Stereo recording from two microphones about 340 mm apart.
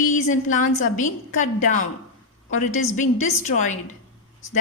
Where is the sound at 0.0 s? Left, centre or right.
Left.